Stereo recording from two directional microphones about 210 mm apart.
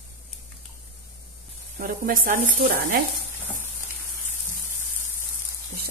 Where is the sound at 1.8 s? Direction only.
40° right (ahead or behind).